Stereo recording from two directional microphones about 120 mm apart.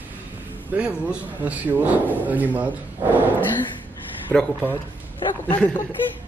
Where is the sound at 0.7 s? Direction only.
10° right (ahead or behind).